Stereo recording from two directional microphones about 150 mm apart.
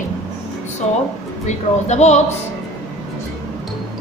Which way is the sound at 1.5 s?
50° left (ahead or behind).